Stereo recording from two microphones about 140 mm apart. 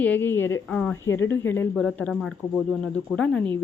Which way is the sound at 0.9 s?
20° left (ahead or behind).